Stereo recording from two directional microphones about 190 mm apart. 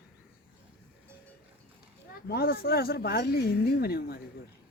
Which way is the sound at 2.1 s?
55° left (ahead or behind).